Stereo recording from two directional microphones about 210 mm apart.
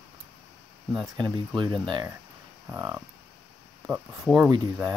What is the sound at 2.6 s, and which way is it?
Speech, 5° right (ahead or behind).